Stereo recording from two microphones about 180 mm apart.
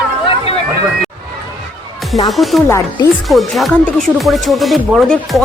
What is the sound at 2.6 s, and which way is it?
Speech, 15° left (ahead or behind).